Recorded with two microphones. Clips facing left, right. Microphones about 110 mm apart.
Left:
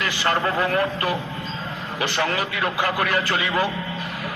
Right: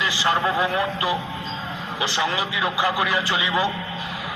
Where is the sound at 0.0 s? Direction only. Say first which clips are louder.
Right 1 dB; 50° left (ahead or behind).